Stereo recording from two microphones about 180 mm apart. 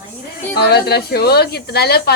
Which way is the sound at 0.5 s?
65° left (ahead or behind).